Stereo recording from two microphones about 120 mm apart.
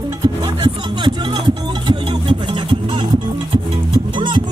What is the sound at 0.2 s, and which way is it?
Music, 40° right (ahead or behind).